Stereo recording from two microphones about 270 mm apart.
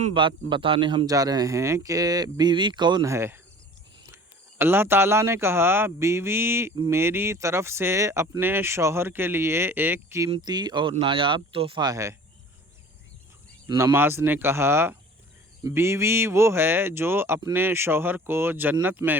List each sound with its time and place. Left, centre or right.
0.0 s speech: centre
13.7 s speech: centre